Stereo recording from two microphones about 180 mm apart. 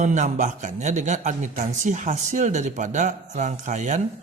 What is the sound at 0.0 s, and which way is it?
A man's voice, 40° right (ahead or behind).